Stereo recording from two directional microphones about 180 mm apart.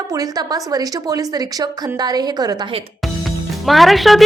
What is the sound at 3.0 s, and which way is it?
Music, centre (ahead or behind).